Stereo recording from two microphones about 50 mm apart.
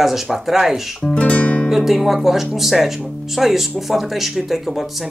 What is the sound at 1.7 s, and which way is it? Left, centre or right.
Speech, centre.